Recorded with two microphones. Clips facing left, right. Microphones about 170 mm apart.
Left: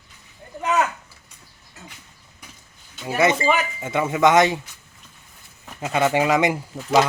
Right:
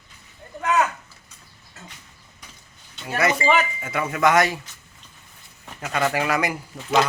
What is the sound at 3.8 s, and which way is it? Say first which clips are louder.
Speech: left 4 dB; 25° left (ahead or behind).